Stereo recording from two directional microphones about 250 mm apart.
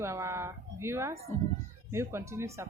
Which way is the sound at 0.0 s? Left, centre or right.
Centre.